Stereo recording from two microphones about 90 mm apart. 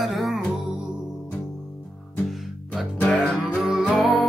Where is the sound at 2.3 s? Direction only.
Centre (ahead or behind).